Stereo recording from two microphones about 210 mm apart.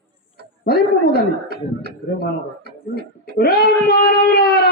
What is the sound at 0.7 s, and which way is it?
Speech, 50° left (ahead or behind).